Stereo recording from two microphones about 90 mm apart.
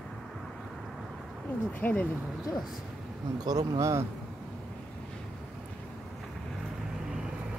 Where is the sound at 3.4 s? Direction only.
45° right (ahead or behind).